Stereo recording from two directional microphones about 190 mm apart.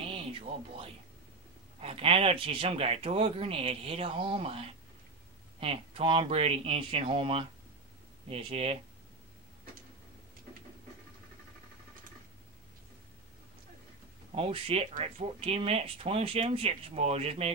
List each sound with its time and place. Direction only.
0.0 s music: 30° right (ahead or behind)
1.8 s speech: 30° right (ahead or behind)
14.3 s speech: 30° right (ahead or behind)